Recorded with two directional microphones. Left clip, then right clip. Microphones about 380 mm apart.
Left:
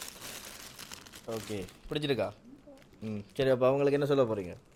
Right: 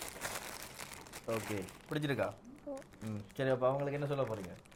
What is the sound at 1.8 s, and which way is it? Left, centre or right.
Speech, left.